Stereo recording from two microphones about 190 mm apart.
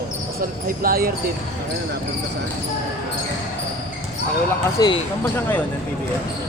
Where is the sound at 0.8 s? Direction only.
50° right (ahead or behind).